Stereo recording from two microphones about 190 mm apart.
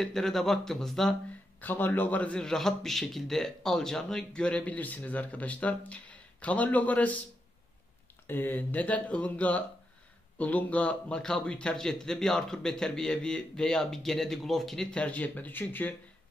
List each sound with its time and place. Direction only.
0.0 s a man's voice: centre (ahead or behind)
8.3 s a man's voice: 10° left (ahead or behind)